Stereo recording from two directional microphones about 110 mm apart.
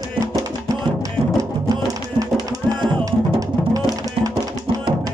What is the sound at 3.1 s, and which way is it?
Drum, 30° right (ahead or behind).